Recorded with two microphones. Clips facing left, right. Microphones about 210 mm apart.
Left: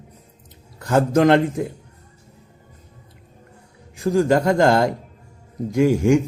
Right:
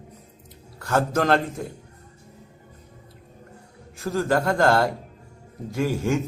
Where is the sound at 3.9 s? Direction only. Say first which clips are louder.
Left 6 dB; 15° left (ahead or behind).